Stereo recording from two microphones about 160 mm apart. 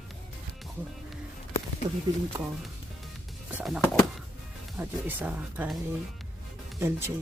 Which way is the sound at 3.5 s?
Centre (ahead or behind).